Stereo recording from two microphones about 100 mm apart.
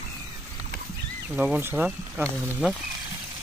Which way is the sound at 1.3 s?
15° right (ahead or behind).